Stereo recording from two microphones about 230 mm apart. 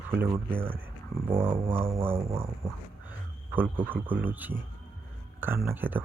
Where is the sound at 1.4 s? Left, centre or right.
Right.